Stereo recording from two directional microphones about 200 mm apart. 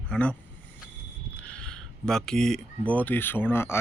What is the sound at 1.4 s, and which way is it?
Speech, 5° left (ahead or behind).